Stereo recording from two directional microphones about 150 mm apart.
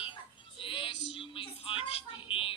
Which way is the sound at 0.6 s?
35° left (ahead or behind).